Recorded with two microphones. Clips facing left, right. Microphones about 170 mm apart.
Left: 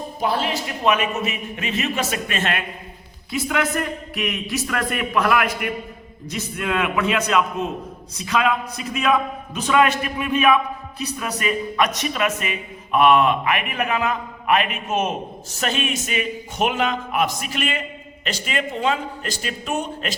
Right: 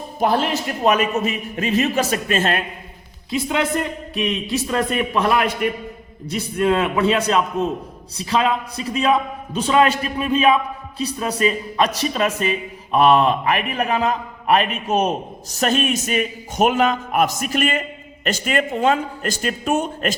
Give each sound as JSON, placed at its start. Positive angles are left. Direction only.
{"t": 0.2, "sound": "a man's voice", "side_deg": -45}